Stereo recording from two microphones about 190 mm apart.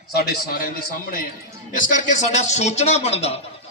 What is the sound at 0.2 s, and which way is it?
Speech, 55° left (ahead or behind).